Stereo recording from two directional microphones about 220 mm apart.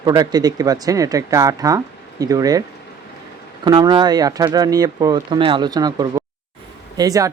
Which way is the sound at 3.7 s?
20° right (ahead or behind).